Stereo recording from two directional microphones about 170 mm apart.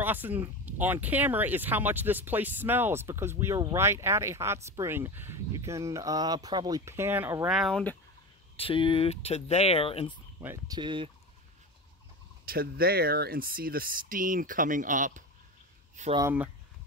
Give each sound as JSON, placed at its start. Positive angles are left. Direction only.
{"t": 0.0, "sound": "speech", "side_deg": -10}
{"t": 7.4, "sound": "speech", "side_deg": 0}
{"t": 8.5, "sound": "turkey", "side_deg": 30}
{"t": 10.4, "sound": "speech", "side_deg": -15}
{"t": 10.8, "sound": "fowl", "side_deg": -30}
{"t": 12.4, "sound": "speech", "side_deg": -60}
{"t": 16.2, "sound": "speech", "side_deg": -15}